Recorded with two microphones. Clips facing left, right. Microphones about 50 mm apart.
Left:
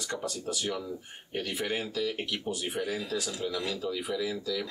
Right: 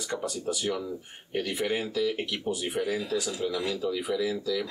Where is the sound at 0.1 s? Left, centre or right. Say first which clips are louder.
Right 3 dB; centre.